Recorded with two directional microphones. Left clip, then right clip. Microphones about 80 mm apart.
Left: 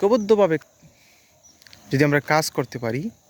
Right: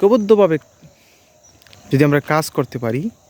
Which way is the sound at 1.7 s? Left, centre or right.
Right.